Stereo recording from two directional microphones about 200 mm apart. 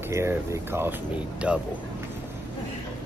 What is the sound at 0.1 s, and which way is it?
Speech, 15° right (ahead or behind).